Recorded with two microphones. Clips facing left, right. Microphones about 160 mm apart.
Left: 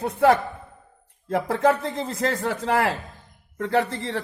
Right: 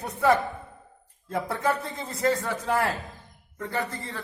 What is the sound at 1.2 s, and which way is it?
A woman's voice, 90° left.